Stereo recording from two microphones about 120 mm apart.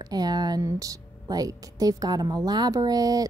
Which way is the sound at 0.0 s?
35° right (ahead or behind).